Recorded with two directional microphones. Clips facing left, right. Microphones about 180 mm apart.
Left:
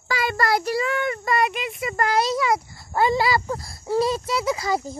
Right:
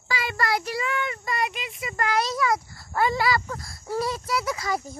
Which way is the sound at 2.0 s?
30° left (ahead or behind).